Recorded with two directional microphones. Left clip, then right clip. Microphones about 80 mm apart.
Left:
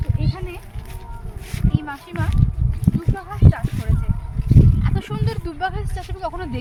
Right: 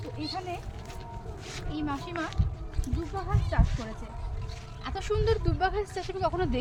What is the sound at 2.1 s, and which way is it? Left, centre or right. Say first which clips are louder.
Speech: left 5 dB; left.